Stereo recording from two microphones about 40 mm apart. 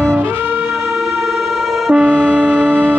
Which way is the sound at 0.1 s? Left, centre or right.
Right.